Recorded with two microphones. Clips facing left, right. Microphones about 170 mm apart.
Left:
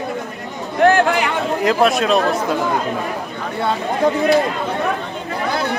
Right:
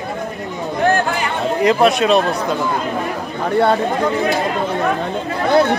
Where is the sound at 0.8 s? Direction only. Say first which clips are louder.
Left 4 dB; 70° left (ahead or behind).